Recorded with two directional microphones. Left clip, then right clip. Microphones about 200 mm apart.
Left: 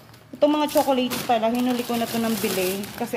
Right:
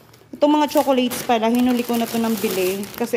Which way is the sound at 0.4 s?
25° right (ahead or behind).